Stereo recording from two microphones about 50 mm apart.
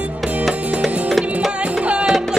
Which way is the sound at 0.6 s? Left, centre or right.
Right.